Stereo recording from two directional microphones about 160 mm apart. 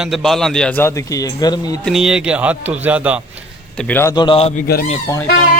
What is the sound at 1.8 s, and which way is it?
Speech, 5° right (ahead or behind).